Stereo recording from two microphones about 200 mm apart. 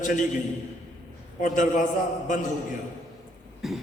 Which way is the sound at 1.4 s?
40° left (ahead or behind).